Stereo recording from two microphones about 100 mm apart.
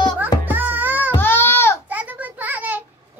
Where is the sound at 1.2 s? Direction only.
20° left (ahead or behind).